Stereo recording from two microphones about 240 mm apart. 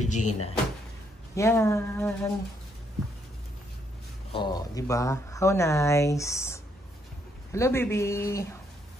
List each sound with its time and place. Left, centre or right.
0.0 s speech: left
1.3 s speech: centre
4.3 s speech: centre